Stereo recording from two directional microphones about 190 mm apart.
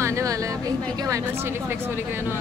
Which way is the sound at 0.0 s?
15° right (ahead or behind).